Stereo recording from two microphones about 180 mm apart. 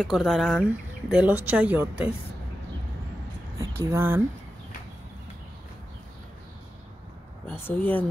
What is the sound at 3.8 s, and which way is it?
Speech, 15° right (ahead or behind).